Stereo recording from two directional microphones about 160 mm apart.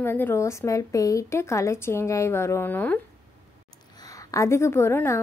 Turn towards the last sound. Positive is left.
turn(degrees=15)  # may be behind; listen again after turning